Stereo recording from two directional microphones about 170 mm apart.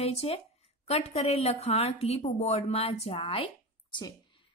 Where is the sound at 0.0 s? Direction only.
35° left (ahead or behind).